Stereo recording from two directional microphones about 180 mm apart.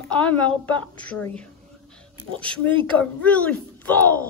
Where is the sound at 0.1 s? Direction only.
5° left (ahead or behind).